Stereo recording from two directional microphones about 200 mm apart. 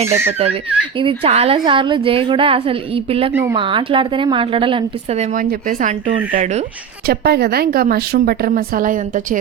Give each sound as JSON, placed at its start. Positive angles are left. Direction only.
{"t": 0.0, "sound": "speech", "side_deg": -10}
{"t": 0.3, "sound": "speech", "side_deg": -30}
{"t": 7.1, "sound": "a woman's voice", "side_deg": -50}